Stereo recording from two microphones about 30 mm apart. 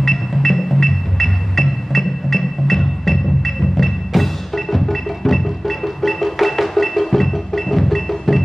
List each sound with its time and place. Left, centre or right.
0.0 s music: centre